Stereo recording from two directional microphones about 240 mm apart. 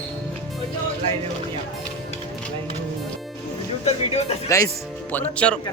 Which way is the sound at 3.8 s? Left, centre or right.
Left.